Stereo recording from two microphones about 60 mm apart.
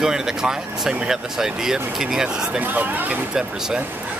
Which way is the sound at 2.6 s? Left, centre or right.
Right.